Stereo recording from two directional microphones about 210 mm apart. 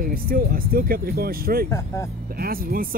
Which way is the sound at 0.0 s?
45° right (ahead or behind).